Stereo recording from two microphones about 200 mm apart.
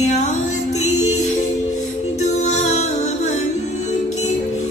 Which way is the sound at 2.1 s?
35° left (ahead or behind).